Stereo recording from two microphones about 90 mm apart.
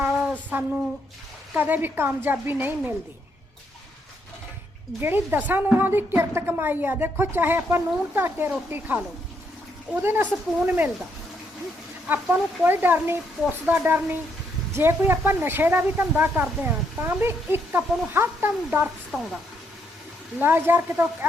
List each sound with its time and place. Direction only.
0.0 s a sound: 20° right (ahead or behind)
1.5 s speech: 20° right (ahead or behind)
4.9 s speech: 25° right (ahead or behind)
12.0 s speech: 20° right (ahead or behind)
19.1 s speech: centre (ahead or behind)
20.4 s speech: 25° right (ahead or behind)